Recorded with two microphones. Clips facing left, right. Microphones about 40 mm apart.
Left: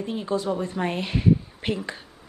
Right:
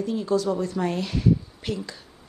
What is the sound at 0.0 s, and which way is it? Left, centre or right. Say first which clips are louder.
A woman's voice: right 3 dB; left.